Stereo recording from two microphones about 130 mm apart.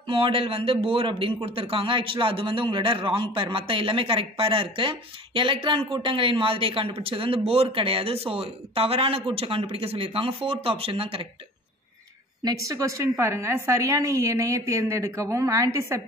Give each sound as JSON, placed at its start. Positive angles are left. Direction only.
{"t": 0.0, "sound": "a man's voice", "side_deg": -45}
{"t": 12.4, "sound": "a woman's voice", "side_deg": -25}